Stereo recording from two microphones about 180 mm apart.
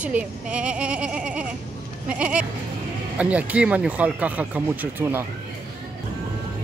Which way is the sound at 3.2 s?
5° right (ahead or behind).